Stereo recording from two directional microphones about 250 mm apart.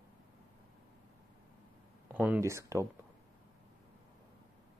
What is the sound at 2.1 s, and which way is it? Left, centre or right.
Speech, centre.